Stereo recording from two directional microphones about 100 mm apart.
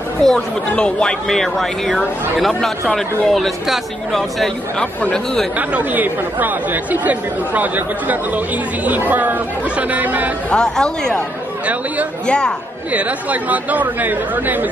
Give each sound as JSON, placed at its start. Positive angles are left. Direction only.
{"t": 0.2, "sound": "speech", "side_deg": 5}
{"t": 5.6, "sound": "speech", "side_deg": -15}
{"t": 10.5, "sound": "speech", "side_deg": 5}
{"t": 12.3, "sound": "speech", "side_deg": 10}
{"t": 12.9, "sound": "speech", "side_deg": -15}